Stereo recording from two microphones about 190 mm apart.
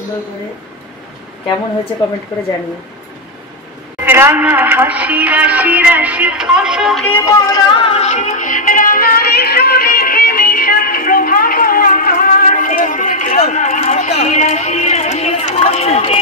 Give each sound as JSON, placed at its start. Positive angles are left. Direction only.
{"t": 4.0, "sound": "speech", "side_deg": -10}
{"t": 7.1, "sound": "music", "side_deg": 15}